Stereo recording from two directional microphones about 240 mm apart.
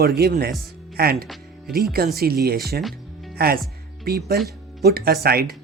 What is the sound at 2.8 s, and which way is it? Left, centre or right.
Music, centre.